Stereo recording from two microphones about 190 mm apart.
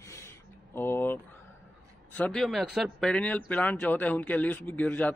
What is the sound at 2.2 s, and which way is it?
Speech, 5° left (ahead or behind).